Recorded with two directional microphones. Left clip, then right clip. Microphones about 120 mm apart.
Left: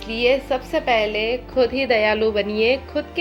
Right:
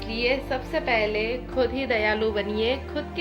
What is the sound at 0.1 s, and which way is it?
Speech, 40° left (ahead or behind).